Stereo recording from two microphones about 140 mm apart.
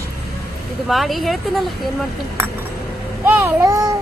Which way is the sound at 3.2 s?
15° right (ahead or behind).